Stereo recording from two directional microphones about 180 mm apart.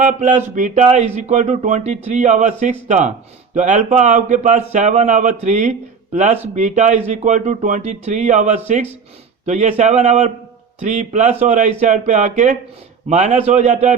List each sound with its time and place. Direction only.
0.0 s speech: 45° right (ahead or behind)